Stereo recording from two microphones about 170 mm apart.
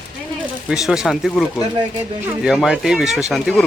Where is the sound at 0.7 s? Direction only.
Centre (ahead or behind).